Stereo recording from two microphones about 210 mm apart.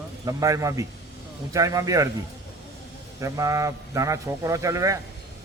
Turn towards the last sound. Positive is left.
turn(degrees=-15)  # may be behind; listen again after turning